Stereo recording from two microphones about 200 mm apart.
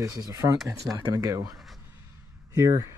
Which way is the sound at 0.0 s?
15° right (ahead or behind).